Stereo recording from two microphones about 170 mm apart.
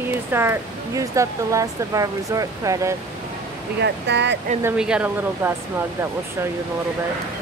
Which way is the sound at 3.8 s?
90° right.